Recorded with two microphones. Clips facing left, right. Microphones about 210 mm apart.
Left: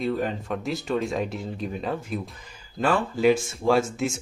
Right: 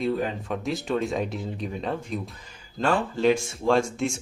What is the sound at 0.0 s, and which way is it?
Speech, centre (ahead or behind).